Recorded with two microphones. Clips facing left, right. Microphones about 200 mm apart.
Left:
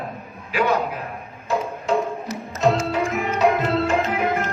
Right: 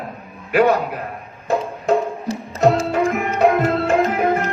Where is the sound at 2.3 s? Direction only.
30° right (ahead or behind).